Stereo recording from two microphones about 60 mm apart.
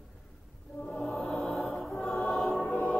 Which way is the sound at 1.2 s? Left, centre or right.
Left.